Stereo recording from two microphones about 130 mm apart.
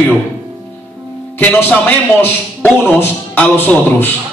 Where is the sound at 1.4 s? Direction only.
15° left (ahead or behind).